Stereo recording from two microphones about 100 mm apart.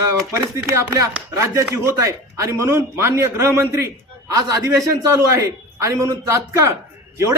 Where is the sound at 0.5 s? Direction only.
30° right (ahead or behind).